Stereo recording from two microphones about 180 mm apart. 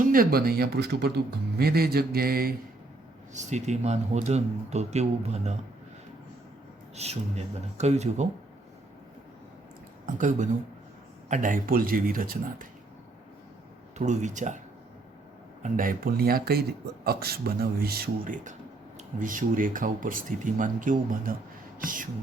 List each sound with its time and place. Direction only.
0.1 s speech: 55° right (ahead or behind)
3.3 s speech: 40° right (ahead or behind)
6.9 s speech: 35° right (ahead or behind)
10.2 s speech: 45° right (ahead or behind)
14.0 s speech: 40° right (ahead or behind)
15.6 s speech: 50° right (ahead or behind)